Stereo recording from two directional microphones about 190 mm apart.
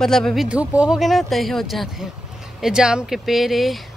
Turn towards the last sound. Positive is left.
turn(degrees=0)  # may be behind; listen again after turning